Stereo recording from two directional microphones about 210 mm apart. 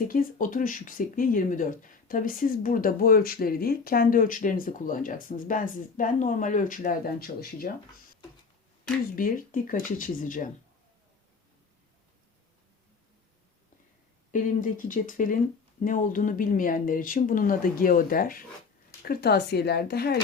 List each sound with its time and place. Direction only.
0.1 s speech: 40° left (ahead or behind)
8.8 s speech: 40° left (ahead or behind)
14.3 s speech: 40° left (ahead or behind)